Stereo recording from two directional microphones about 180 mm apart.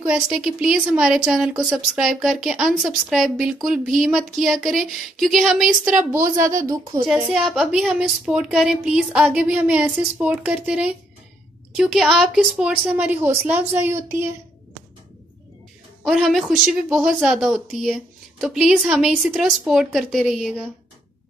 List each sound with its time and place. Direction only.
0.0 s a woman's voice: 5° right (ahead or behind)
6.4 s a woman's voice: 20° right (ahead or behind)
7.2 s a woman's voice: centre (ahead or behind)
16.1 s a woman's voice: centre (ahead or behind)